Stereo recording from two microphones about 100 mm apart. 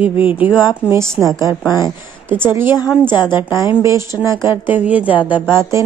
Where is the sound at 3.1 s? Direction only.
45° left (ahead or behind).